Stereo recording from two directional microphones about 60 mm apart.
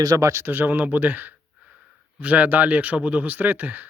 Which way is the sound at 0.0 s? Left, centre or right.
Right.